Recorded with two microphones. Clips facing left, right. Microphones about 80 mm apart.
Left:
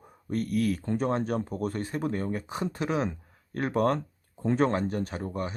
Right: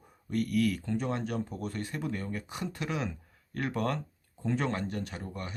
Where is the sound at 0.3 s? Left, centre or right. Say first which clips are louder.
Left 1 dB; left.